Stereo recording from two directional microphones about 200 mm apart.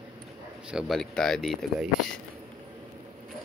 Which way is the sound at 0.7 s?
Centre (ahead or behind).